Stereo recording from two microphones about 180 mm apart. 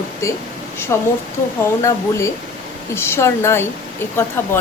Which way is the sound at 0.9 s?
15° left (ahead or behind).